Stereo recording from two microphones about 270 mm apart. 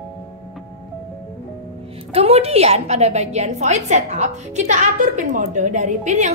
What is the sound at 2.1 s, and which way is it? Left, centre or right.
A woman's voice, right.